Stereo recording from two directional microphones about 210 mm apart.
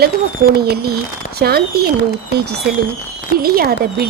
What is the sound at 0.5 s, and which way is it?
A woman's voice, 50° right (ahead or behind).